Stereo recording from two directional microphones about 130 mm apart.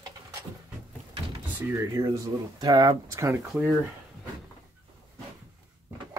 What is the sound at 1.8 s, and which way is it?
Speech, 30° right (ahead or behind).